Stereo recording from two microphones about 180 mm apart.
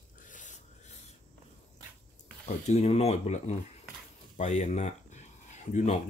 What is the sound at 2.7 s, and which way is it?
Speech, 35° left (ahead or behind).